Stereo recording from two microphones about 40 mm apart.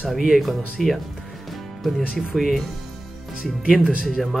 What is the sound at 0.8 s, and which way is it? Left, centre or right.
Speech, centre.